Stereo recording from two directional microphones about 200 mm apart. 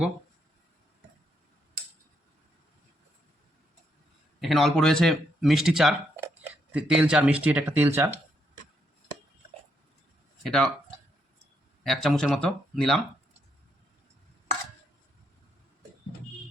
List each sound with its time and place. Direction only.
4.4 s speech: centre (ahead or behind)
10.4 s speech: centre (ahead or behind)
11.8 s speech: centre (ahead or behind)